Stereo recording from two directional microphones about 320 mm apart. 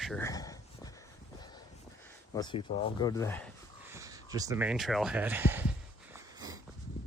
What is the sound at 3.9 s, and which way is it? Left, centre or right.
Speech, centre.